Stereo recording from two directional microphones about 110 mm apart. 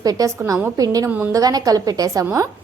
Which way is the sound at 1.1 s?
20° right (ahead or behind).